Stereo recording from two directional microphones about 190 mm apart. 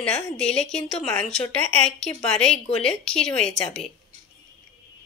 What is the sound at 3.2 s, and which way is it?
Speech, 30° left (ahead or behind).